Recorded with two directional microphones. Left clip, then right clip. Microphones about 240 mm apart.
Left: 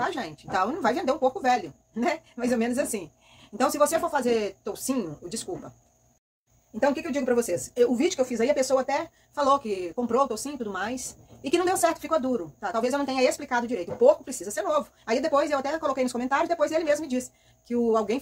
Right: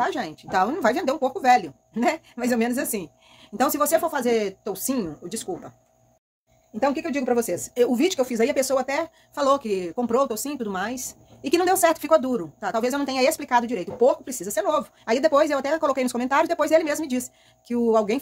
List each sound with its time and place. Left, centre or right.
0.0 s speech: right
6.8 s speech: right